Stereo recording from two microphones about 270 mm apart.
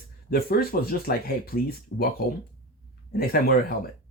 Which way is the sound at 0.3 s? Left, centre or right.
Left.